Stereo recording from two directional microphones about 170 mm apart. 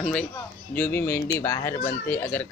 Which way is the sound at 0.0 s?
5° left (ahead or behind).